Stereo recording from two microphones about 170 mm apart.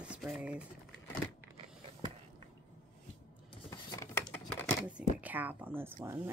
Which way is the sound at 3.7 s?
25° left (ahead or behind).